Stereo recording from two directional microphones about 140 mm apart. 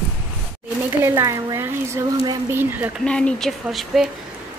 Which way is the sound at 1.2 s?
20° right (ahead or behind).